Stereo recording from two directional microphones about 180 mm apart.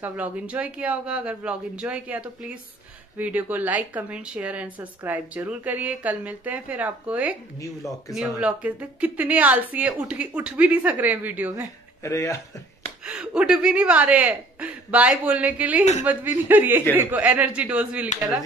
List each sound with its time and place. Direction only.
0.0 s speech: 10° right (ahead or behind)
7.5 s speech: 20° left (ahead or behind)
8.1 s speech: 5° right (ahead or behind)
12.0 s speech: 15° left (ahead or behind)
13.0 s speech: 5° right (ahead or behind)